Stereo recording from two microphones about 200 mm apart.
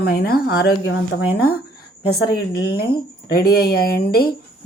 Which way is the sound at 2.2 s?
50° left (ahead or behind).